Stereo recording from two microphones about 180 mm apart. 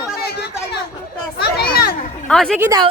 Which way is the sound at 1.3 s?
60° left (ahead or behind).